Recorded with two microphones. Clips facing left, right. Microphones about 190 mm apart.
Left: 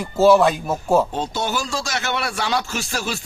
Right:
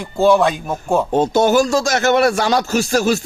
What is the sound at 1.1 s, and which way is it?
Speech, 45° right (ahead or behind).